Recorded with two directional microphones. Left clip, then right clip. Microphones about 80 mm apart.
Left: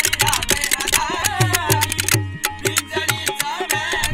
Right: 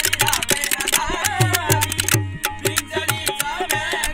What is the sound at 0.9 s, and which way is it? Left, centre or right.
Music, right.